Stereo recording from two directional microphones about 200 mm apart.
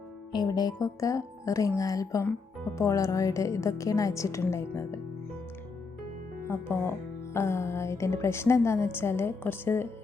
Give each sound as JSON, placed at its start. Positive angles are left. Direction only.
{"t": 0.3, "sound": "a woman's voice", "side_deg": 20}
{"t": 6.5, "sound": "a woman's voice", "side_deg": 10}